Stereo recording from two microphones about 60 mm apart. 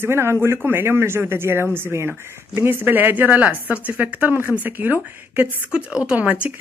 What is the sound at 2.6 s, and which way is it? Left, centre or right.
Speech, right.